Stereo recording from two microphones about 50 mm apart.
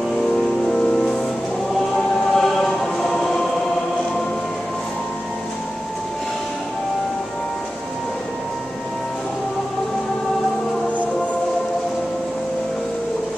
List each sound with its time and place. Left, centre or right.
0.7 s music: centre
2.1 s choir: centre